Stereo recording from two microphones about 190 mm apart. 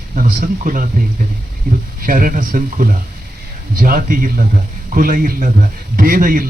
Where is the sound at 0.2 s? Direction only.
45° right (ahead or behind).